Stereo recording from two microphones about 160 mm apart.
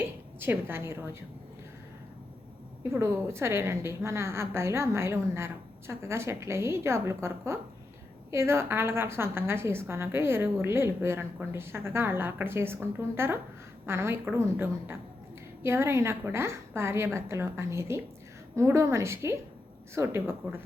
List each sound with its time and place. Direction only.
0.3 s a woman's voice: 15° right (ahead or behind)
2.9 s a woman's voice: 15° right (ahead or behind)